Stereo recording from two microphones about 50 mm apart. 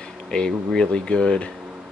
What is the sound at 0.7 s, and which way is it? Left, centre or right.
Speech, centre.